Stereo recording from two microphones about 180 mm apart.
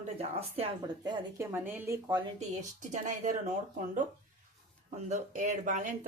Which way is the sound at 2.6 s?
40° right (ahead or behind).